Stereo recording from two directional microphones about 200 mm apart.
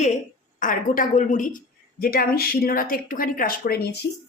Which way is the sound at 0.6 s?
40° left (ahead or behind).